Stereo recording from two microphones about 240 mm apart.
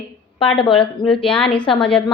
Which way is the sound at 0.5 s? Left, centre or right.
Left.